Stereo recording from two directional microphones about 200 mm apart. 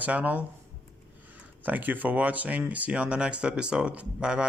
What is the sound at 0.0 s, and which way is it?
Speech, 5° right (ahead or behind).